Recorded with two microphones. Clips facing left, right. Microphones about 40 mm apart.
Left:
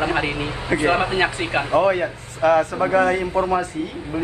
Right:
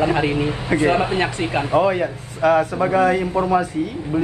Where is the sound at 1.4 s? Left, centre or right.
Left.